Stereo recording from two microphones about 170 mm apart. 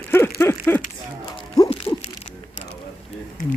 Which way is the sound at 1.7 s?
35° left (ahead or behind).